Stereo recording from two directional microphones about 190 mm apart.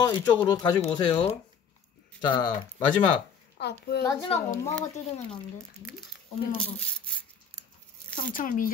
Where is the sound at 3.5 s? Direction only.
60° left (ahead or behind).